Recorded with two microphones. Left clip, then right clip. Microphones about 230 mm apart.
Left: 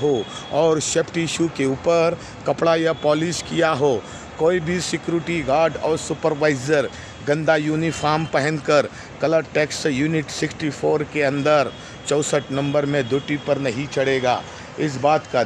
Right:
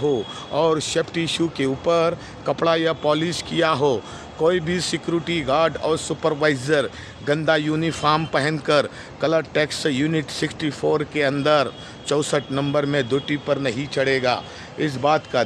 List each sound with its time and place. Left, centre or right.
0.0 s speech: centre